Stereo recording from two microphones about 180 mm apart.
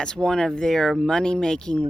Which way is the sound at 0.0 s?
5° left (ahead or behind).